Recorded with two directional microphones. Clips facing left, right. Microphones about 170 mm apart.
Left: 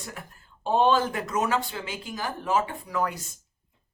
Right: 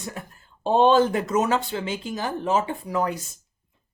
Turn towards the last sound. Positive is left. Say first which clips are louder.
# right 3 dB
turn(degrees=-25)  # may be behind; listen again after turning